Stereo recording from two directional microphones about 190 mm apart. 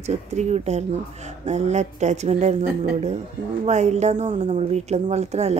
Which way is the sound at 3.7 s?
35° right (ahead or behind).